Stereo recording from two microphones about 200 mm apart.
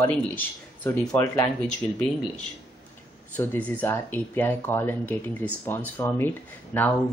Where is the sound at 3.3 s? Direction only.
10° left (ahead or behind).